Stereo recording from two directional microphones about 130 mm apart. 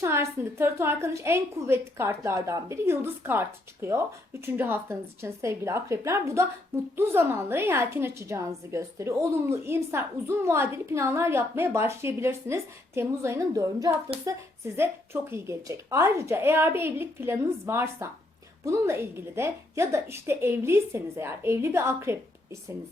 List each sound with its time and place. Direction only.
0.0 s a woman's voice: 20° right (ahead or behind)